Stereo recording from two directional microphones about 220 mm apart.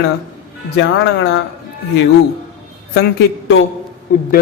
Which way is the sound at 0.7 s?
50° left (ahead or behind).